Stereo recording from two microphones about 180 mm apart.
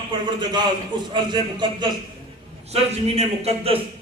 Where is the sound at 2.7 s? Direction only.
35° right (ahead or behind).